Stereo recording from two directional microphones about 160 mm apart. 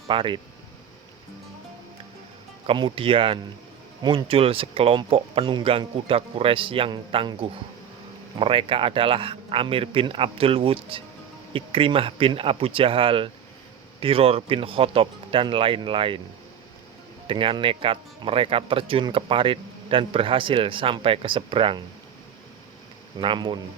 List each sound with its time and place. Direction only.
0.1 s speech: 30° right (ahead or behind)
2.6 s speech: 30° right (ahead or behind)
17.2 s speech: 30° right (ahead or behind)
23.1 s speech: 30° right (ahead or behind)